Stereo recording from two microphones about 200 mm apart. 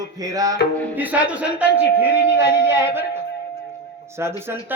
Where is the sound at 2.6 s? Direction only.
10° right (ahead or behind).